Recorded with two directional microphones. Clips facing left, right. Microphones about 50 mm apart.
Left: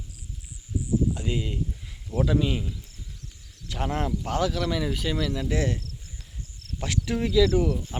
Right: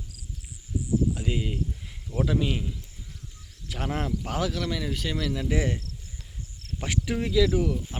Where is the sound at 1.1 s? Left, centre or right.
Centre.